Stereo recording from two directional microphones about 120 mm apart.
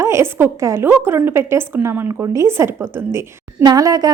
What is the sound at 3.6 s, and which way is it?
Speech, 30° right (ahead or behind).